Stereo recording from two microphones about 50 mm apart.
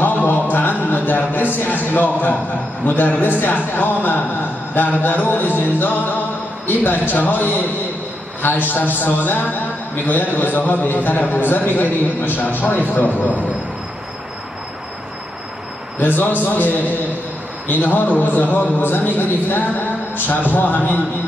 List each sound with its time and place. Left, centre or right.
0.0 s a sound: left
2.8 s a man's voice: left
16.0 s a man's voice: left